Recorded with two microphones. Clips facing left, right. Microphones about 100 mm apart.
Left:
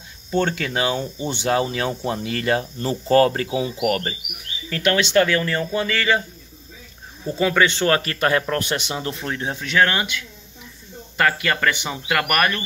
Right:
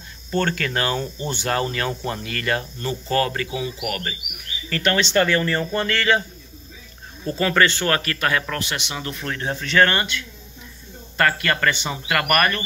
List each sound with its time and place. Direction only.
0.3 s speech: 15° left (ahead or behind); by 4.2 s 35° left (ahead or behind)
4.6 s speech: 5° left (ahead or behind)
7.2 s speech: 5° left (ahead or behind)
7.7 s speech: 25° left (ahead or behind); by 12.6 s 5° left (ahead or behind)